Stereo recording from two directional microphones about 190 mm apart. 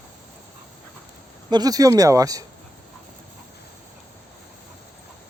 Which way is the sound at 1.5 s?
20° right (ahead or behind).